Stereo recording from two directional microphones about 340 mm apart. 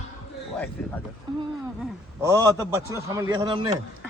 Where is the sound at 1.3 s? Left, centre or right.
Centre.